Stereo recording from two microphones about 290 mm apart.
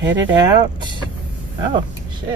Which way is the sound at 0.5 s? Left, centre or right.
Centre.